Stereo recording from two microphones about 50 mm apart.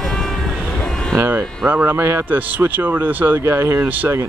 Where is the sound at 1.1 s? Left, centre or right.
Right.